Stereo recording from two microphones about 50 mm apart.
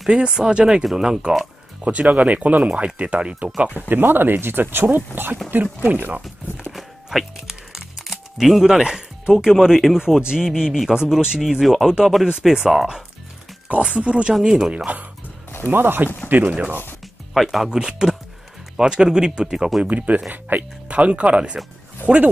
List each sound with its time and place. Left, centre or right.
0.4 s speech: centre
1.9 s speech: right
3.9 s speech: right
6.7 s music: centre
9.3 s speech: centre
13.7 s speech: right
15.6 s speech: right
16.3 s speech: right
17.3 s speech: centre
17.6 s speech: centre
19.8 s speech: right